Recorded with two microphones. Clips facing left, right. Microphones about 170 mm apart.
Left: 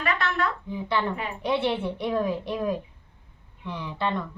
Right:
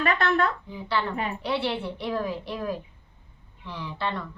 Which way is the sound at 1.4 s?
20° left (ahead or behind).